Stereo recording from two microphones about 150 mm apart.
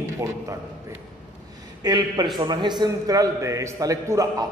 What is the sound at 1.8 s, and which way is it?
A man's voice, 25° right (ahead or behind).